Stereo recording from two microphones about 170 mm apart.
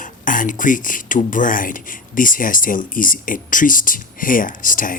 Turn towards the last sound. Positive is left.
turn(degrees=50)  # may be behind; listen again after turning